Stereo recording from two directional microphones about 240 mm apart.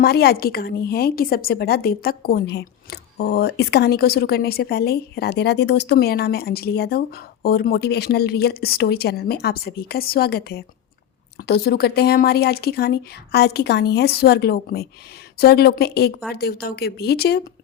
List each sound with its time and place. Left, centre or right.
0.0 s a woman's voice: left